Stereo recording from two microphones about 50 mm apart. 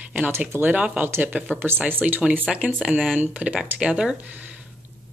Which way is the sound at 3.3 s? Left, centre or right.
Right.